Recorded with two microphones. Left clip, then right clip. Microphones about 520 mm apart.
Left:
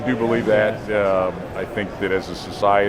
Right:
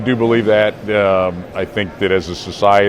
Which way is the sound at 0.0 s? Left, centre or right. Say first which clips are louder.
Right 6 dB; right.